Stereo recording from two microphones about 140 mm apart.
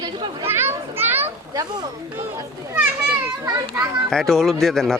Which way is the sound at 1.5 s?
30° right (ahead or behind).